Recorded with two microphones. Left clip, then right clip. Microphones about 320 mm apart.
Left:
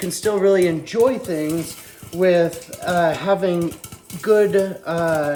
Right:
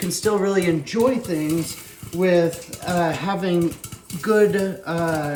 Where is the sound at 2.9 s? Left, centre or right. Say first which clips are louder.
Left 5 dB; centre.